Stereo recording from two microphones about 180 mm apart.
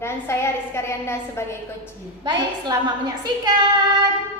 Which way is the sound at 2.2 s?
25° right (ahead or behind).